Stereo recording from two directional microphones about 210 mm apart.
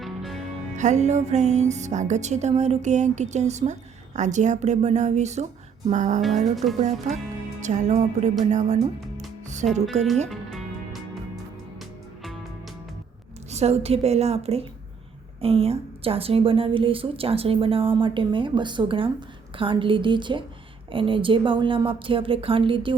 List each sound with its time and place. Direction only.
0.0 s music: centre (ahead or behind)
0.8 s speech: 35° right (ahead or behind)
10.2 s music: centre (ahead or behind)
13.5 s a woman's voice: 30° right (ahead or behind)